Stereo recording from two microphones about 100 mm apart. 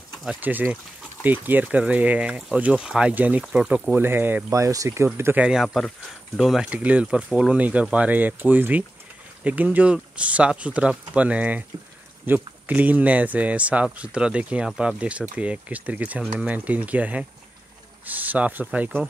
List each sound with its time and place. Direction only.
0.4 s speech: 20° right (ahead or behind)
3.9 s speech: 20° right (ahead or behind)
4.5 s speech: 35° right (ahead or behind)
5.4 s speech: 5° right (ahead or behind)